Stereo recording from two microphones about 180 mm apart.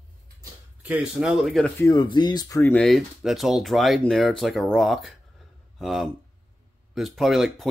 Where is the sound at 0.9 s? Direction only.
5° right (ahead or behind).